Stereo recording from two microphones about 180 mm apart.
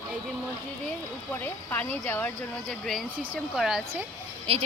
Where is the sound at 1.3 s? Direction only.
10° left (ahead or behind); by 3.8 s 5° right (ahead or behind).